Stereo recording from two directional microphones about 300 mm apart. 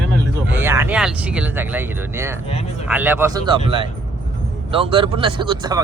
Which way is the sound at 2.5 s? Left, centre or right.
Centre.